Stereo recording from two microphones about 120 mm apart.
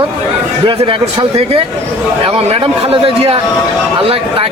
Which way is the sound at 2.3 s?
60° right (ahead or behind).